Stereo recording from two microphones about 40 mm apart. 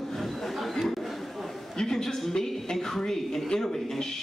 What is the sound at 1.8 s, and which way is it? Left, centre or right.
Speech, centre.